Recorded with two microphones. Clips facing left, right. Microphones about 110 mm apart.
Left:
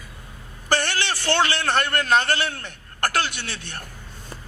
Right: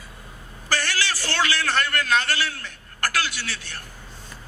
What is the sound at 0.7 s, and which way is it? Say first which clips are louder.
A man's voice: left 3 dB; 25° left (ahead or behind).